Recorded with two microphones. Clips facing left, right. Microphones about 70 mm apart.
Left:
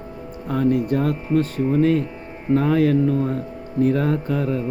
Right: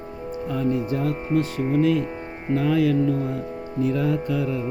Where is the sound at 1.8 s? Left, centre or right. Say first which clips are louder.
Left 1 dB; left.